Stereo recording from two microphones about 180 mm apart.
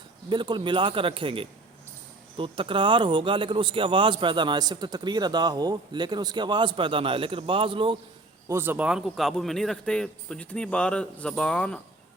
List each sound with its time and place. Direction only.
0.3 s a man's voice: 25° right (ahead or behind)
8.4 s a man's voice: 15° right (ahead or behind); by 11.8 s 5° left (ahead or behind)